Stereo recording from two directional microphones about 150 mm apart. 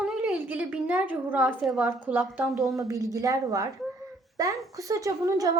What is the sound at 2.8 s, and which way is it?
A woman's voice, 20° right (ahead or behind).